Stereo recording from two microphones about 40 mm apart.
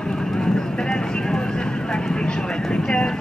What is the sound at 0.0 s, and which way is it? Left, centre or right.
Horse, centre.